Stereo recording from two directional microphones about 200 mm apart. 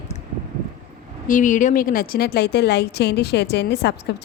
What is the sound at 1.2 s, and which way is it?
A woman's voice, 40° left (ahead or behind).